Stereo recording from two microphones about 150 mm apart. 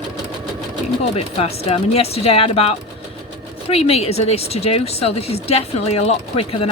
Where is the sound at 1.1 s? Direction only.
40° left (ahead or behind).